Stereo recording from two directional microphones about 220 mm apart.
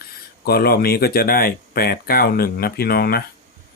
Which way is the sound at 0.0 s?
45° left (ahead or behind).